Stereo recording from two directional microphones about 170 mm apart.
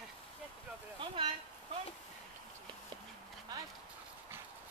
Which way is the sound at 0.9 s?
35° right (ahead or behind).